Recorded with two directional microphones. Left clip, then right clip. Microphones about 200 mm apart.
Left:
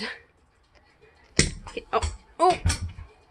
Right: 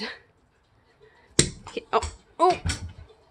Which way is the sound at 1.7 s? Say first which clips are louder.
Right 2 dB; 20° right (ahead or behind).